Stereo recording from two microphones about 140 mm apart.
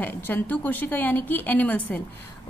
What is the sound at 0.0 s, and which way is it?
A woman's voice, 15° left (ahead or behind).